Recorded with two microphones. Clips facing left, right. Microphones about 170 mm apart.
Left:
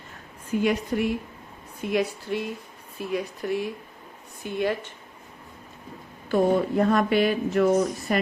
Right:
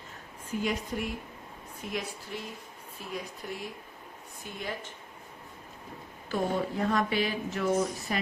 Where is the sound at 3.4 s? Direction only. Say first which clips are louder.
Left 14 dB; 70° left (ahead or behind).